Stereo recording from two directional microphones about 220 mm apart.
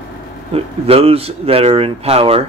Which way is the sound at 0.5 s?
25° right (ahead or behind).